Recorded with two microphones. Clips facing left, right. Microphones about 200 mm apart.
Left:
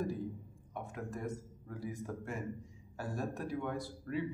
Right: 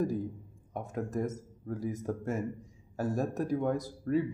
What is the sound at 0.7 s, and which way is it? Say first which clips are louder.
Speech: right 8 dB; 40° right (ahead or behind).